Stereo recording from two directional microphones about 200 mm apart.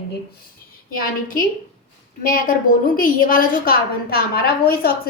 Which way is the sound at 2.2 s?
45° left (ahead or behind).